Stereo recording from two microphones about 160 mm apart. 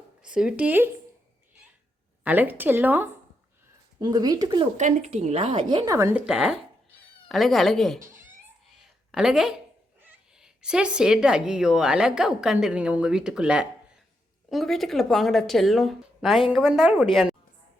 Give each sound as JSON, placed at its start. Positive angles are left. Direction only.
{"t": 0.2, "sound": "speech", "side_deg": -5}
{"t": 2.2, "sound": "speech", "side_deg": -10}
{"t": 4.0, "sound": "speech", "side_deg": -25}
{"t": 4.8, "sound": "a woman's voice", "side_deg": -50}
{"t": 6.1, "sound": "speech", "side_deg": -5}
{"t": 7.9, "sound": "speech", "side_deg": -55}
{"t": 8.8, "sound": "a sound", "side_deg": -5}
{"t": 10.0, "sound": "speech", "side_deg": -5}